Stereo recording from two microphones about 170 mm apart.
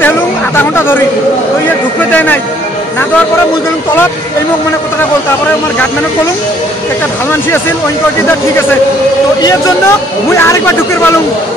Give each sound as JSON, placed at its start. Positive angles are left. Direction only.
{"t": 0.7, "sound": "a man's voice", "side_deg": 15}
{"t": 2.0, "sound": "speech", "side_deg": 10}
{"t": 9.4, "sound": "speech", "side_deg": 20}